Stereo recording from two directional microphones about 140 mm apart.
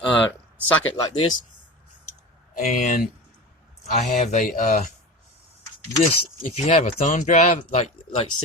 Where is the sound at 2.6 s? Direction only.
55° left (ahead or behind).